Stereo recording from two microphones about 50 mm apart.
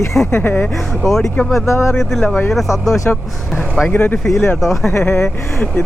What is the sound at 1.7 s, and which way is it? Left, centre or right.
Speech, left.